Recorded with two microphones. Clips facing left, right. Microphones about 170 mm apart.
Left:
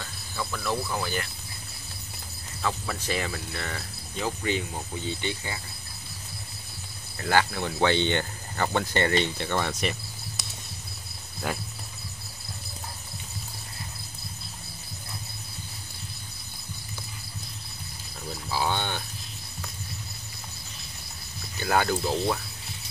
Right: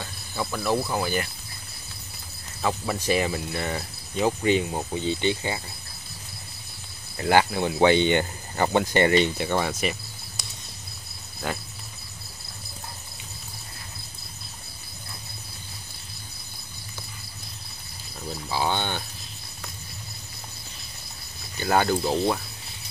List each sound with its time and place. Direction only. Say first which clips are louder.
0.0 s speech: right 3 dB; 20° right (ahead or behind)
2.6 s cricket: right 4 dB; 15° right (ahead or behind)
7.2 s speech: right 4 dB; 20° right (ahead or behind)
11.4 s speech: right 1 dB; 5° left (ahead or behind)
18.5 s speech: right 2 dB; centre (ahead or behind)
21.5 s speech: right 3 dB; centre (ahead or behind)